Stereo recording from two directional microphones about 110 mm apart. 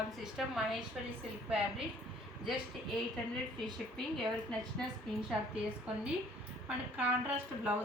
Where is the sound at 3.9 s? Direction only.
5° left (ahead or behind).